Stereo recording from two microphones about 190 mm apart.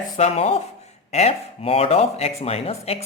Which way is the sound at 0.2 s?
30° left (ahead or behind).